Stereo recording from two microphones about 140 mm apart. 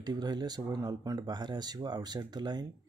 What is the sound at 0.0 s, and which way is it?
Speech, 30° right (ahead or behind).